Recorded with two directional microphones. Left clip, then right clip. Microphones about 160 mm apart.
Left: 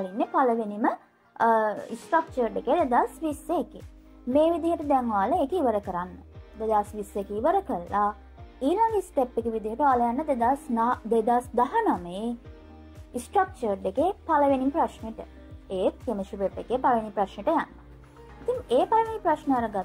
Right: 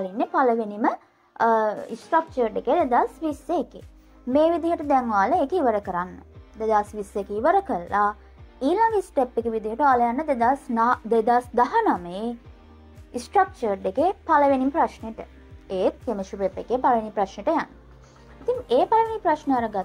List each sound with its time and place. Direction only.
0.0 s a woman's voice: 20° right (ahead or behind)
18.7 s a woman's voice: 20° right (ahead or behind)